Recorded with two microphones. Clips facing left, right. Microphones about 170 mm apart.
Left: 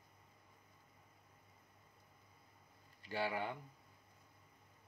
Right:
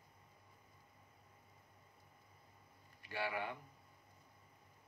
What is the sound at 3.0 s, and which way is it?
Speech, 30° left (ahead or behind).